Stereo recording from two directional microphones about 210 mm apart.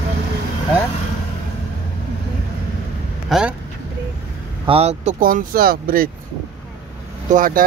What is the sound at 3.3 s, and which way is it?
Speech, 5° right (ahead or behind).